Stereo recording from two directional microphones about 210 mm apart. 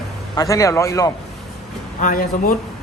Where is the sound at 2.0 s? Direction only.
40° left (ahead or behind).